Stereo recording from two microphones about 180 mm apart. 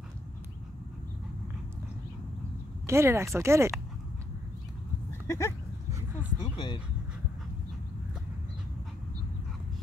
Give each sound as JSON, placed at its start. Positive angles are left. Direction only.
{"t": 2.9, "sound": "speech", "side_deg": -15}
{"t": 5.2, "sound": "speech", "side_deg": 15}
{"t": 6.4, "sound": "speech", "side_deg": 25}